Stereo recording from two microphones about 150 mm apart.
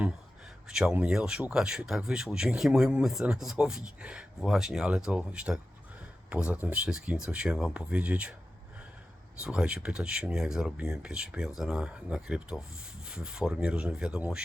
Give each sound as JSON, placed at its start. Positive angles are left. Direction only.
{"t": 0.7, "sound": "speech", "side_deg": -5}
{"t": 9.4, "sound": "speech", "side_deg": -5}